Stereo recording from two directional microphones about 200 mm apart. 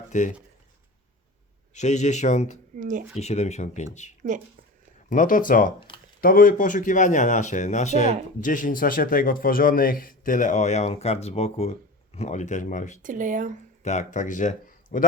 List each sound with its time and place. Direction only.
0.1 s speech: 35° left (ahead or behind)
1.7 s speech: 35° left (ahead or behind)
2.7 s speech: 40° right (ahead or behind)
3.2 s speech: 35° left (ahead or behind)
4.2 s speech: 40° right (ahead or behind)
5.0 s a man's voice: 40° left (ahead or behind)
5.9 s a sound: 25° left (ahead or behind)
6.2 s a man's voice: 45° left (ahead or behind)
13.0 s speech: 40° right (ahead or behind)
13.8 s speech: 35° left (ahead or behind)